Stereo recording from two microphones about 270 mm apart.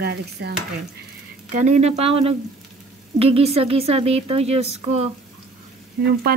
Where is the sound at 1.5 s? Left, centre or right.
Right.